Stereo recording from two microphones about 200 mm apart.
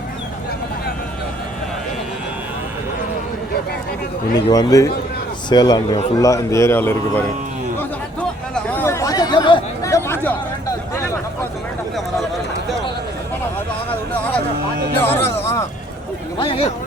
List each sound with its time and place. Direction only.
4.4 s a man's voice: 20° left (ahead or behind)
7.8 s chatter: 5° left (ahead or behind)
10.9 s a sound: 15° left (ahead or behind)
14.1 s a sound: 5° left (ahead or behind)
15.0 s music: 10° left (ahead or behind)
16.4 s a man's voice: 25° left (ahead or behind)